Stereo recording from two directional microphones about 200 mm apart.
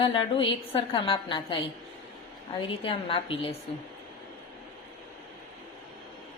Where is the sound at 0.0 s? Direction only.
25° left (ahead or behind).